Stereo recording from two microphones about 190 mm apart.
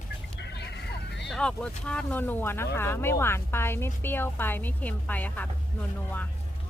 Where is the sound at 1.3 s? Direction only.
5° left (ahead or behind).